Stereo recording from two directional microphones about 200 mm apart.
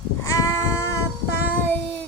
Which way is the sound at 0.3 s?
15° left (ahead or behind).